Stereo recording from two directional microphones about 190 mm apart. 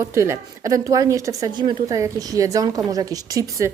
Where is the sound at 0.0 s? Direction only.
15° right (ahead or behind).